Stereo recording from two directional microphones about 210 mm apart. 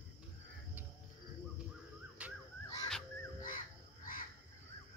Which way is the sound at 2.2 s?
5° right (ahead or behind).